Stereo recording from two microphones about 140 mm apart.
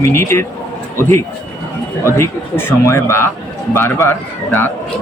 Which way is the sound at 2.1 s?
15° left (ahead or behind).